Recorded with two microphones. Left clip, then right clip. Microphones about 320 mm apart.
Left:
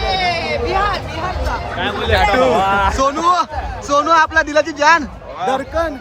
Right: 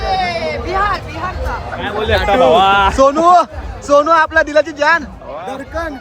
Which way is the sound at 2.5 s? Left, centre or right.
Right.